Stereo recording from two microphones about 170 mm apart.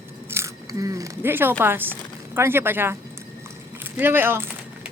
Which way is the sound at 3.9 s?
10° right (ahead or behind).